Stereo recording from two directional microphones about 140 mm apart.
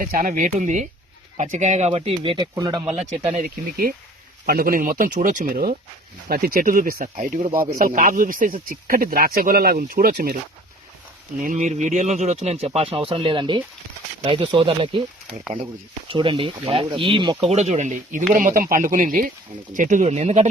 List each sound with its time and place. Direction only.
0.0 s speech: 75° right (ahead or behind); by 2.9 s 30° right (ahead or behind)
3.0 s speech: 50° right (ahead or behind)
3.4 s speech: 90° right
8.7 s speech: 90° right
11.3 s speech: 65° right (ahead or behind); by 17.5 s 35° right (ahead or behind)
17.5 s speech: 50° right (ahead or behind)
18.3 s speech: 75° right (ahead or behind)
19.7 s speech: 65° right (ahead or behind)